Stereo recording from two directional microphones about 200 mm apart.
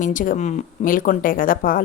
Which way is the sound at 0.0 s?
40° left (ahead or behind).